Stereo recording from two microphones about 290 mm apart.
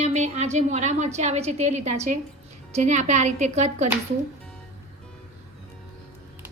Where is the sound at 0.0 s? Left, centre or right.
Right.